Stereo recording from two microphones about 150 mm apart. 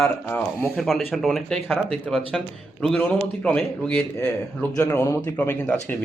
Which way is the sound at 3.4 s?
5° left (ahead or behind).